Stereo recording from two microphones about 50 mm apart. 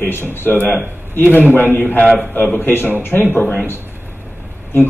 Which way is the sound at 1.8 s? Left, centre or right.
Left.